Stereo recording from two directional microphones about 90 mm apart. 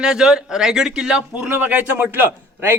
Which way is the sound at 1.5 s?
20° right (ahead or behind).